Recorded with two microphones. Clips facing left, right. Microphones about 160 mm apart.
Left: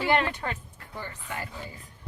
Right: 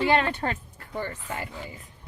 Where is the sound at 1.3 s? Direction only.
40° right (ahead or behind).